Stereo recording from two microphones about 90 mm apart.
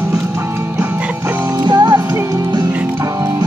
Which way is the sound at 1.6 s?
55° right (ahead or behind).